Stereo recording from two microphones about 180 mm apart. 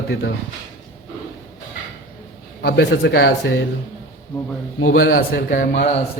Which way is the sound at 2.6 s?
65° left (ahead or behind).